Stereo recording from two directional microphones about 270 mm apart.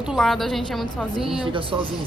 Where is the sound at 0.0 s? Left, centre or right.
Centre.